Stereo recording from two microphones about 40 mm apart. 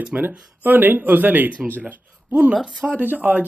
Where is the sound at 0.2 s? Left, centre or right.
Right.